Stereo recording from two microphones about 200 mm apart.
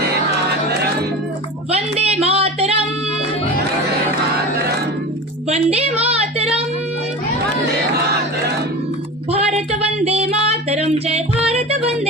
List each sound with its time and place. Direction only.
1.7 s a sound: 30° right (ahead or behind)
5.5 s a woman's voice: 30° right (ahead or behind)
9.3 s female singing: 30° right (ahead or behind)